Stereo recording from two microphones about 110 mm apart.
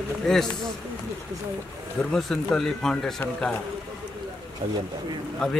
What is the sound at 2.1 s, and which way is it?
Speech, 5° left (ahead or behind).